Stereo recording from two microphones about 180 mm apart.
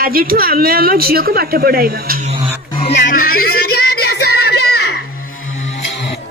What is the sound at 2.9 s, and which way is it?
Music, 60° left (ahead or behind).